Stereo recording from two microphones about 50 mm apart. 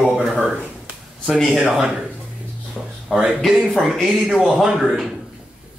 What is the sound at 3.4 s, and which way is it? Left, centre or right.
Speech, centre.